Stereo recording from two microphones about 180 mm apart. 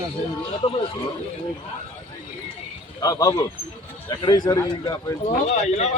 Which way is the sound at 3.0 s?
20° left (ahead or behind).